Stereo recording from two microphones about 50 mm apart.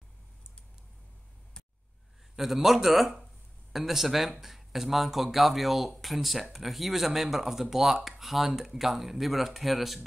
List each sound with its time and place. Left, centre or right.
2.3 s speech: centre